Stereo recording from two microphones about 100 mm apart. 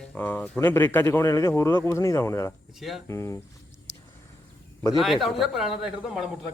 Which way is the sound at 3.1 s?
30° left (ahead or behind).